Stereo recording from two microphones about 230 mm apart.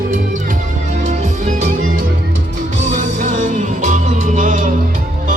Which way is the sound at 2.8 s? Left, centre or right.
Right.